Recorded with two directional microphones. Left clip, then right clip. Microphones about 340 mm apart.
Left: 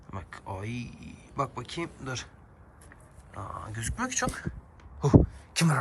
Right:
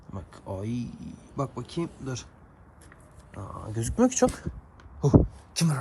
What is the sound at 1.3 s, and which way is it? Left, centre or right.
Speech, centre.